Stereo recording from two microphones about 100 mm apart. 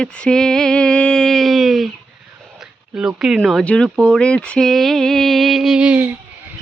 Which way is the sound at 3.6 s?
10° left (ahead or behind).